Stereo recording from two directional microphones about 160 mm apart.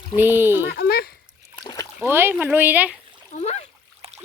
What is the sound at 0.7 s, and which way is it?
Speech, 80° left.